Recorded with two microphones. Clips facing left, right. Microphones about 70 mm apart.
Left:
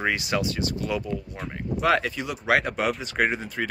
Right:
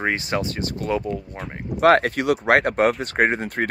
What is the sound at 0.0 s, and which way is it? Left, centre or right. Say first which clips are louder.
Speech: right 2 dB; right.